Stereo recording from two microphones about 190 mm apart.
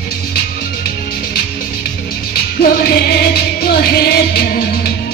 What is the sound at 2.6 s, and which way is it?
Music, 55° left (ahead or behind).